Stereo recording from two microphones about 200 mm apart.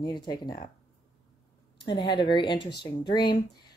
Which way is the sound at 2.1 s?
25° left (ahead or behind).